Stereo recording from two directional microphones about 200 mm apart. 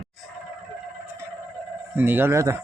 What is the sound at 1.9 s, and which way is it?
Speech, 10° right (ahead or behind).